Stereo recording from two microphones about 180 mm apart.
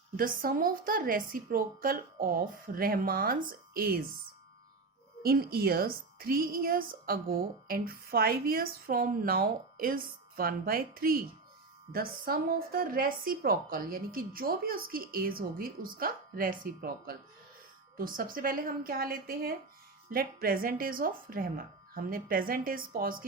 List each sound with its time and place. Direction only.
0.2 s a woman's voice: 50° right (ahead or behind)
5.2 s a woman's voice: 60° right (ahead or behind)